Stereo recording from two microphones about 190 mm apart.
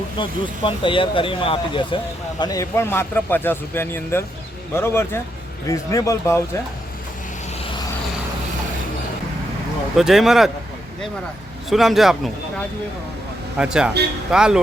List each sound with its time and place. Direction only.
0.2 s a man's voice: 25° left (ahead or behind)
9.9 s speech: centre (ahead or behind)
11.7 s speech: centre (ahead or behind)